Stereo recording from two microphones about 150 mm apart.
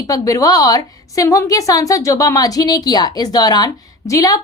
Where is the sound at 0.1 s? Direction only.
25° left (ahead or behind).